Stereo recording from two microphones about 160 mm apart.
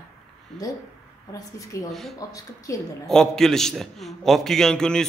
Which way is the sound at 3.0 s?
5° left (ahead or behind).